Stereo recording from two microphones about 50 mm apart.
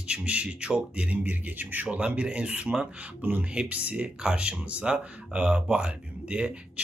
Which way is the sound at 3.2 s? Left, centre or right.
Right.